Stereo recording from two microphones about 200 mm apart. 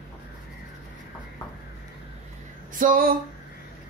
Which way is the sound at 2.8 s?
45° right (ahead or behind).